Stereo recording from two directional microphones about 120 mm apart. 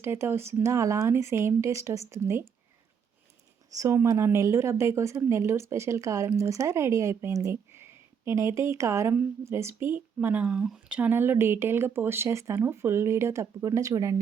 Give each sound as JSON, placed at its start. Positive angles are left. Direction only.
{"t": 0.0, "sound": "speech", "side_deg": -20}
{"t": 3.8, "sound": "speech", "side_deg": -25}